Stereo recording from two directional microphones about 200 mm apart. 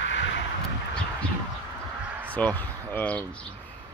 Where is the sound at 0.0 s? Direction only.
65° left (ahead or behind).